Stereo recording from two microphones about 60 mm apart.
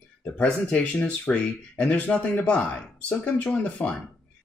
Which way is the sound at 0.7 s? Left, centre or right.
Centre.